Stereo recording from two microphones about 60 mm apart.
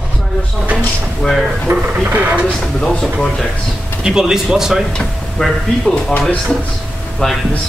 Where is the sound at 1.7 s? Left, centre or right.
Right.